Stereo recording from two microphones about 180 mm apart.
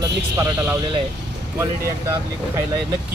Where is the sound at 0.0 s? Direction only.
15° right (ahead or behind).